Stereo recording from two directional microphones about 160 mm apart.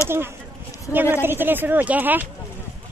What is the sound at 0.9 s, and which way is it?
Speech, 10° right (ahead or behind).